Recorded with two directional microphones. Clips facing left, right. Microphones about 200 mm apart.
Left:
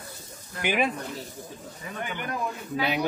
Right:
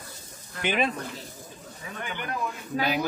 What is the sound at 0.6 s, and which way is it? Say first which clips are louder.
Speech: left 1 dB; 10° left (ahead or behind).